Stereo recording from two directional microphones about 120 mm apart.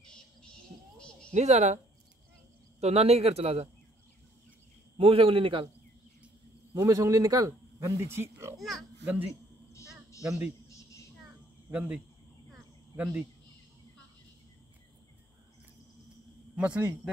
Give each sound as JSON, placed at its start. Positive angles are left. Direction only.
{"t": 0.0, "sound": "a sound", "side_deg": 5}
{"t": 1.3, "sound": "a woman's voice", "side_deg": -70}
{"t": 2.8, "sound": "a man's voice", "side_deg": -60}
{"t": 4.9, "sound": "a man's voice", "side_deg": -50}
{"t": 6.7, "sound": "speech", "side_deg": -30}
{"t": 8.5, "sound": "a child's voice", "side_deg": 0}
{"t": 9.0, "sound": "speech", "side_deg": -15}
{"t": 9.3, "sound": "bleat", "side_deg": 25}
{"t": 10.7, "sound": "a sound", "side_deg": 25}
{"t": 11.7, "sound": "speech", "side_deg": -10}
{"t": 12.5, "sound": "cricket", "side_deg": -15}
{"t": 16.5, "sound": "speech", "side_deg": -10}